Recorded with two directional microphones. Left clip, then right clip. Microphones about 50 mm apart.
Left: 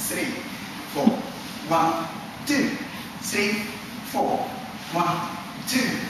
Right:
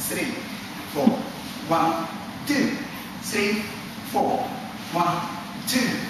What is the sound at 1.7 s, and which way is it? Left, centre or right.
Speech, centre.